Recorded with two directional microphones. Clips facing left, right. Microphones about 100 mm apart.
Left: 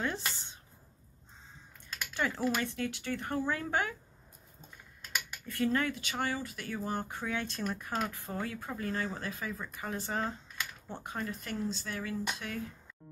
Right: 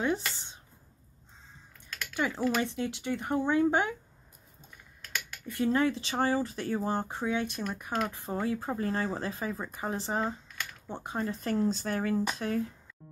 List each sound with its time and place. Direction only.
0.0 s speech: 15° right (ahead or behind)
2.1 s speech: 15° right (ahead or behind)
5.5 s speech: 20° right (ahead or behind); by 12.6 s 35° right (ahead or behind)